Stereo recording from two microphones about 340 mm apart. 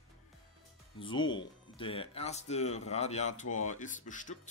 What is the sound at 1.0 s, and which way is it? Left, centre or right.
Speech, centre.